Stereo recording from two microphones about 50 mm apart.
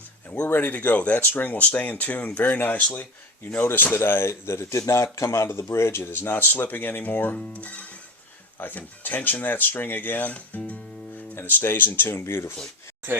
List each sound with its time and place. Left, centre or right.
0.4 s speech: left
2.8 s speech: left
3.6 s speech: left
5.5 s speech: left
7.3 s speech: left
12.2 s speech: left